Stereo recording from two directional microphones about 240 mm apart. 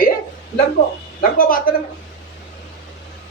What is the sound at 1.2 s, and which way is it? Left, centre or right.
Speech, left.